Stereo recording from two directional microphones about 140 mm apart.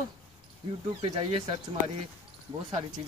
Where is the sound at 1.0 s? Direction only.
45° right (ahead or behind).